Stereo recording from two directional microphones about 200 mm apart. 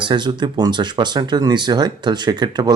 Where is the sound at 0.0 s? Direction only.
25° right (ahead or behind).